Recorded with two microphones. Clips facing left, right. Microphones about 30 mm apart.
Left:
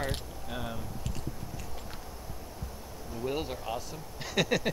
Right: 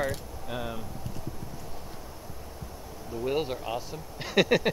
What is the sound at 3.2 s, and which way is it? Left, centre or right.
Speech, centre.